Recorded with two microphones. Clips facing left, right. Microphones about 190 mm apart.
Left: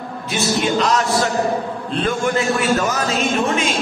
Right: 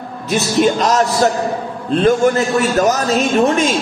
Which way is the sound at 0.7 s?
45° right (ahead or behind).